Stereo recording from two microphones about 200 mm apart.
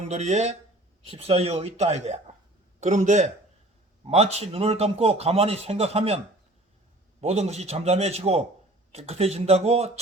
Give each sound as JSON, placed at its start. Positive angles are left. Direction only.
{"t": 0.1, "sound": "a man's voice", "side_deg": -35}
{"t": 7.2, "sound": "a man's voice", "side_deg": -30}